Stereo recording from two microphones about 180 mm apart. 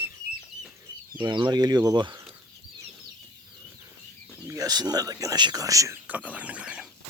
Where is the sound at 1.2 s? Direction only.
25° right (ahead or behind).